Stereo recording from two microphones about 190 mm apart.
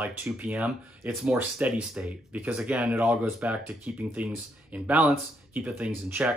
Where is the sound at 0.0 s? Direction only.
10° right (ahead or behind).